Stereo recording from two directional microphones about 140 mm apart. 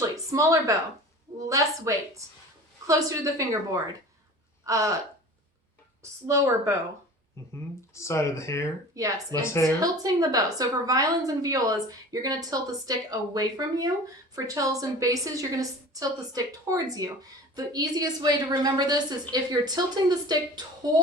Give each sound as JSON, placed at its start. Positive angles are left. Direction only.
{"t": 0.0, "sound": "a woman's voice", "side_deg": -20}
{"t": 4.6, "sound": "a woman's voice", "side_deg": -20}
{"t": 6.0, "sound": "a woman's voice", "side_deg": -20}
{"t": 7.9, "sound": "speech", "side_deg": 20}
{"t": 9.0, "sound": "a woman's voice", "side_deg": -25}
{"t": 9.5, "sound": "speech", "side_deg": 20}
{"t": 9.8, "sound": "a woman's voice", "side_deg": -25}